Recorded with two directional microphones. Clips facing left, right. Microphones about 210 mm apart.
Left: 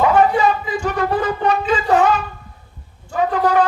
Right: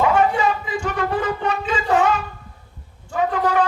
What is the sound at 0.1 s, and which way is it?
Wind instrument, 35° left (ahead or behind).